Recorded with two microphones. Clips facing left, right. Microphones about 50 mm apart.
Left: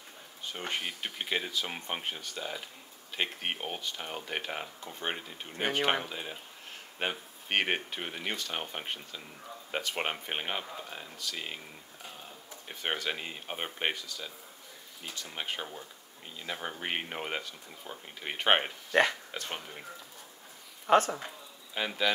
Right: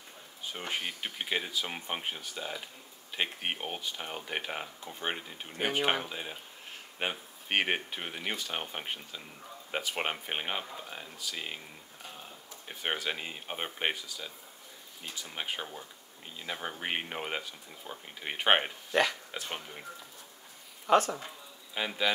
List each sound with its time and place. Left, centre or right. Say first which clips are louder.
0.5 s speech: even; centre
12.6 s speech: even; centre
20.9 s speech: left 1 dB; left
21.7 s speech: left 1 dB; centre